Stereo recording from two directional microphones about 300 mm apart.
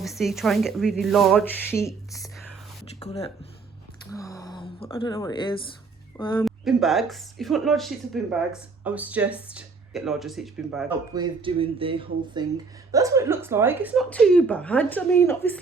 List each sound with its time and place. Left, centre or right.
0.0 s speech: centre
3.0 s speech: centre
6.4 s speech: centre
11.1 s speech: centre